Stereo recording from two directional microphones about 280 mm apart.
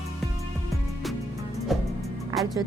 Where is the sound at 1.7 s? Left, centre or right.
Centre.